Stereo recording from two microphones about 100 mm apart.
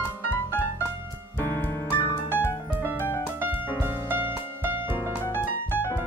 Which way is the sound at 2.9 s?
20° left (ahead or behind).